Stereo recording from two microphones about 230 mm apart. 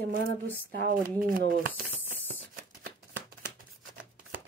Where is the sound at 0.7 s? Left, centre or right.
Right.